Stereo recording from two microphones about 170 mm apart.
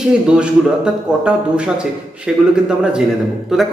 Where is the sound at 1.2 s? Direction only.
5° right (ahead or behind).